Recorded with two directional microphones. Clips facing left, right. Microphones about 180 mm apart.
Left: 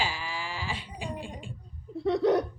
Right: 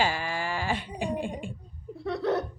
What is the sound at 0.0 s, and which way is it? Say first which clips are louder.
Sheep: right 5 dB; 50° right (ahead or behind).